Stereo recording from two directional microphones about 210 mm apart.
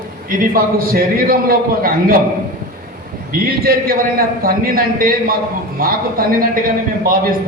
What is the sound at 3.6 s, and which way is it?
A man's voice, 45° right (ahead or behind).